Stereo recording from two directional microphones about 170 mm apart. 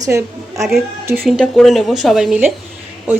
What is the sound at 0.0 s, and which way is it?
A woman's voice, 20° right (ahead or behind).